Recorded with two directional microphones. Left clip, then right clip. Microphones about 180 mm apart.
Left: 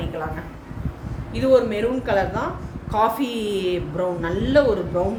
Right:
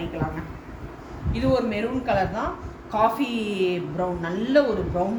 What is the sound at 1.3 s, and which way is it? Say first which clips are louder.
A woman's voice: left 6 dB; 25° left (ahead or behind).